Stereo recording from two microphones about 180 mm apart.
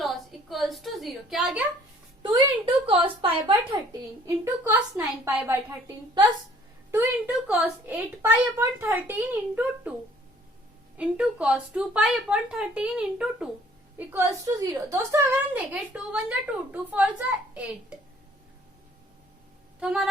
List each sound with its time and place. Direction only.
0.5 s a woman's voice: centre (ahead or behind)
2.2 s a woman's voice: 30° right (ahead or behind)
4.4 s a woman's voice: 10° right (ahead or behind)
6.9 s a woman's voice: 10° right (ahead or behind)
10.9 s a woman's voice: 5° right (ahead or behind)
14.1 s a woman's voice: 15° right (ahead or behind)
19.8 s a woman's voice: 5° right (ahead or behind)